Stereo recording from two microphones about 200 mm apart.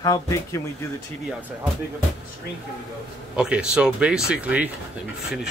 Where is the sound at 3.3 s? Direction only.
5° right (ahead or behind).